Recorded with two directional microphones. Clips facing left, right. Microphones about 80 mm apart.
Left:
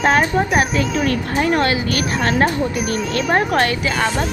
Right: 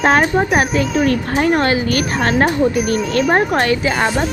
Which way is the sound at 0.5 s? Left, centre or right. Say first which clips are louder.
Right 2 dB; right.